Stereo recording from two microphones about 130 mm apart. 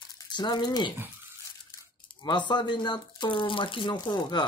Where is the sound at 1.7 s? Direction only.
35° left (ahead or behind).